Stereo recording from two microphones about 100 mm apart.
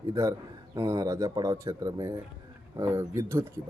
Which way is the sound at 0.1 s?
35° right (ahead or behind).